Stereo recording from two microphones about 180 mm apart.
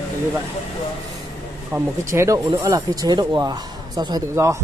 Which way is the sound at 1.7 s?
15° right (ahead or behind).